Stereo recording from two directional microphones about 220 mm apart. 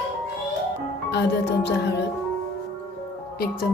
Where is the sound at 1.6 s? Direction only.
50° left (ahead or behind).